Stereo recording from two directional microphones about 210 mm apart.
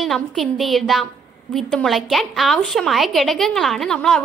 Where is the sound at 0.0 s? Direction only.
Centre (ahead or behind).